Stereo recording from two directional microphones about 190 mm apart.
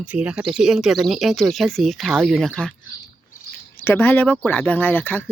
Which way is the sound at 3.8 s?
10° left (ahead or behind).